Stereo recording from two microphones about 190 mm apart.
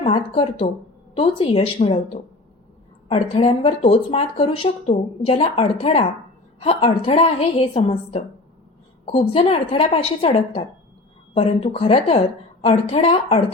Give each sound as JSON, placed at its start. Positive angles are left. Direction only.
{"t": 0.0, "sound": "speech", "side_deg": 30}
{"t": 3.1, "sound": "speech", "side_deg": 30}